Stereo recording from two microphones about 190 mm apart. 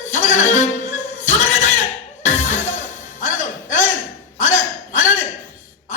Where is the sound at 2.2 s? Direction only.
40° left (ahead or behind).